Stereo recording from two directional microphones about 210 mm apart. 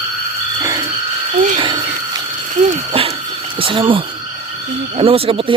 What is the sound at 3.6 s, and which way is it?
Speech, 25° right (ahead or behind).